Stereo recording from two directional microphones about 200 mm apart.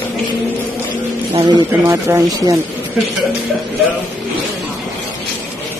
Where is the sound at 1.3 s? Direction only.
20° right (ahead or behind).